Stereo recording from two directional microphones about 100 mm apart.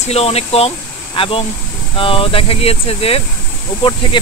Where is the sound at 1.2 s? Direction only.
65° left (ahead or behind).